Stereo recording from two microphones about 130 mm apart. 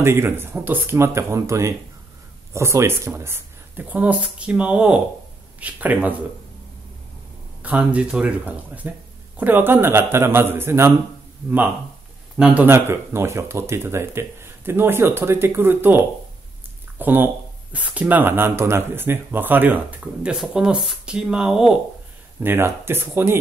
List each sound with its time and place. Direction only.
0.0 s speech: 20° right (ahead or behind)
7.6 s speech: 10° right (ahead or behind)
12.4 s speech: 5° right (ahead or behind)
12.6 s speech: 20° right (ahead or behind)
17.0 s speech: 15° right (ahead or behind)
22.4 s speech: 15° right (ahead or behind)